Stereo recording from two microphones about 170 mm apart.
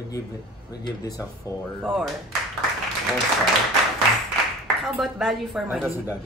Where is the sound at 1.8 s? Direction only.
Centre (ahead or behind).